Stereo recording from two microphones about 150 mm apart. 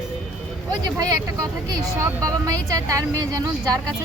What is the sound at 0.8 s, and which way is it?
Speech, 25° right (ahead or behind).